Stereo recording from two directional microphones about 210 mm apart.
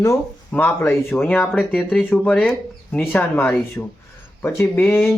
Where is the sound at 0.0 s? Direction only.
10° left (ahead or behind).